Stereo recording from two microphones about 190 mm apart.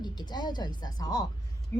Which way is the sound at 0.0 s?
20° left (ahead or behind).